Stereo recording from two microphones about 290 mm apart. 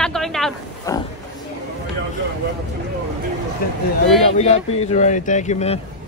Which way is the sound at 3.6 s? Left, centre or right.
Left.